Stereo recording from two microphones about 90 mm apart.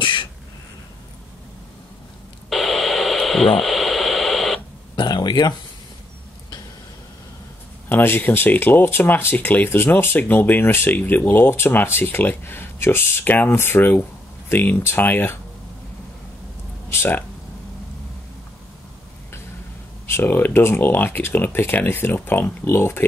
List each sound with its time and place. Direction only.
0.0 s a sound: 65° left (ahead or behind)
2.5 s radio: centre (ahead or behind)
4.9 s a sound: 50° left (ahead or behind)
7.9 s speech: 25° left (ahead or behind)
16.9 s speech: 30° left (ahead or behind)
20.1 s speech: 25° left (ahead or behind)